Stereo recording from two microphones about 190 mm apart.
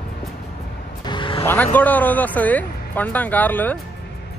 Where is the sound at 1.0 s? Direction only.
25° left (ahead or behind).